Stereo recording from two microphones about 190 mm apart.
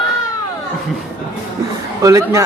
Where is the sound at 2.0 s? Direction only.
15° right (ahead or behind).